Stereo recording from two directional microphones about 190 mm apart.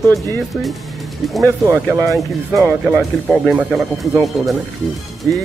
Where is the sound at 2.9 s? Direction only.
Centre (ahead or behind).